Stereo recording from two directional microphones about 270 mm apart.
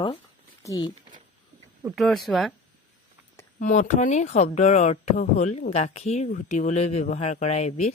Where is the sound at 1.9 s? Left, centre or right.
Centre.